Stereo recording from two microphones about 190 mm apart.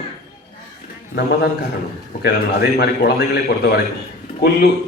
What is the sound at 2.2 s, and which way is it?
Speech, 55° left (ahead or behind).